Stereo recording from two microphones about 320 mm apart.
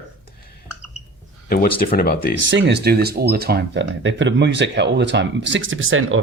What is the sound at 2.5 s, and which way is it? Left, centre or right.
Speech, right.